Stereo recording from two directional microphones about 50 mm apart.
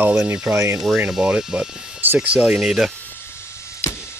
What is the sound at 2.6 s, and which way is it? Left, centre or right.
Speech, centre.